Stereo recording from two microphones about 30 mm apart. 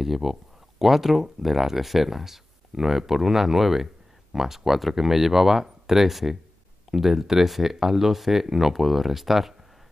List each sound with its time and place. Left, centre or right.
0.0 s speech: centre